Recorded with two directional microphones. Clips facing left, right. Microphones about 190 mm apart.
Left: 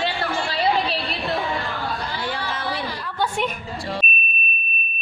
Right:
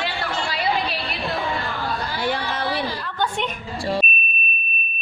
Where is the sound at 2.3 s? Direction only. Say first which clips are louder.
Right 5 dB; 65° right (ahead or behind).